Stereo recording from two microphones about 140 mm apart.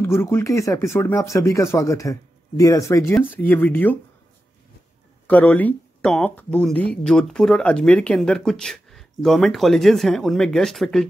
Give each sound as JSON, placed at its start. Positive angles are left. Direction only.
{"t": 0.0, "sound": "speech", "side_deg": 20}
{"t": 5.2, "sound": "speech", "side_deg": 10}